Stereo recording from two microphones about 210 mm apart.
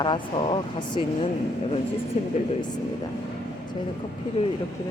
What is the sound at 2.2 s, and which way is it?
Speech, 35° left (ahead or behind).